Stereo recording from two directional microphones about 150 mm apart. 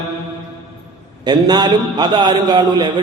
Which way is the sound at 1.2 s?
30° right (ahead or behind).